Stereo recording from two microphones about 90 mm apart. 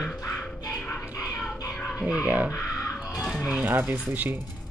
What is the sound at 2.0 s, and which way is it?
A woman's voice, 15° right (ahead or behind).